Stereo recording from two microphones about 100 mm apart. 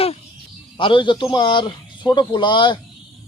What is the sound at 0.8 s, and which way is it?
A man's voice, 55° left (ahead or behind).